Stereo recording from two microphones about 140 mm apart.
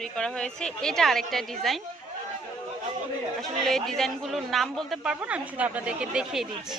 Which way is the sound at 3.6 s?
Centre (ahead or behind).